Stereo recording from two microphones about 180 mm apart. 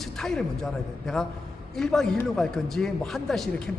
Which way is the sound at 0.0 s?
5° left (ahead or behind).